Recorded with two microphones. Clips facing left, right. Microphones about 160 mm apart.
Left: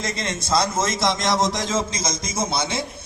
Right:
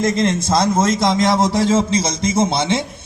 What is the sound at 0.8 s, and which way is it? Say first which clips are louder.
Speech: right 7 dB; 55° right (ahead or behind).